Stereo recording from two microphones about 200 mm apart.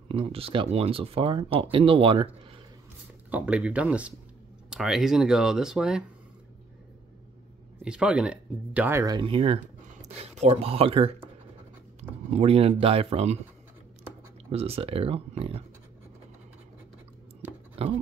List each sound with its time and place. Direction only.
0.1 s speech: 30° right (ahead or behind)
3.3 s speech: 5° right (ahead or behind)
7.8 s speech: 5° right (ahead or behind); by 11.1 s 30° right (ahead or behind)
12.3 s speech: 30° right (ahead or behind)
14.5 s speech: 30° right (ahead or behind)
17.8 s speech: 30° right (ahead or behind)